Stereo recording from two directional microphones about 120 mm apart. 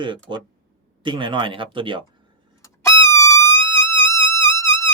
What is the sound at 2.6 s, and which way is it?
Music, 25° left (ahead or behind).